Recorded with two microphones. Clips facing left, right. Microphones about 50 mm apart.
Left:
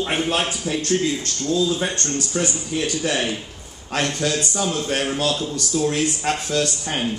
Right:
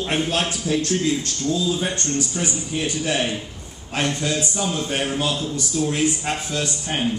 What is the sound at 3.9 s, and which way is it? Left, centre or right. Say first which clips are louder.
Speech: left 1 dB; left.